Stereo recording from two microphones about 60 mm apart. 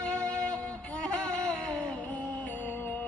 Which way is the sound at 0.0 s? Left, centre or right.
Centre.